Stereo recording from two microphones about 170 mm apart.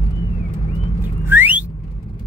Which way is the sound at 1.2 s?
10° right (ahead or behind).